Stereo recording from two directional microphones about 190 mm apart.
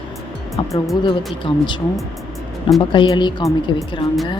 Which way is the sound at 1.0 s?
25° left (ahead or behind).